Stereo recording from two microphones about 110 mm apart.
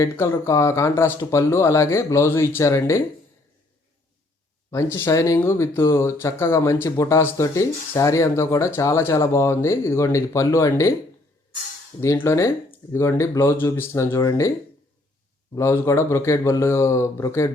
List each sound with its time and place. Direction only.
0.0 s speech: 25° left (ahead or behind)
4.7 s speech: 25° left (ahead or behind)
11.9 s speech: 20° left (ahead or behind)
15.5 s speech: 25° left (ahead or behind)